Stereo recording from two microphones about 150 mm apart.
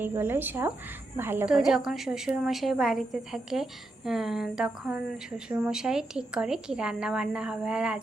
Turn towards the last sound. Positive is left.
turn(degrees=-5)  # may be behind; listen again after turning